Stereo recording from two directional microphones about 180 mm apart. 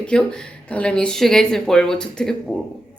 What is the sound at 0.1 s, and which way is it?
Speech, 5° left (ahead or behind).